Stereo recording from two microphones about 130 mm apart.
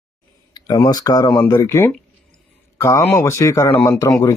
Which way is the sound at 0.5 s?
30° left (ahead or behind).